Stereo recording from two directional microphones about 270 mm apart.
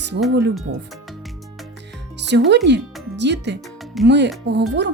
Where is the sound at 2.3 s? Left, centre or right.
Right.